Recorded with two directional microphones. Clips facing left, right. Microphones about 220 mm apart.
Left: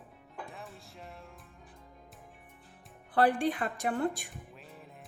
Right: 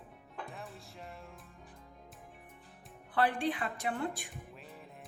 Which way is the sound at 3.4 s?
45° left (ahead or behind).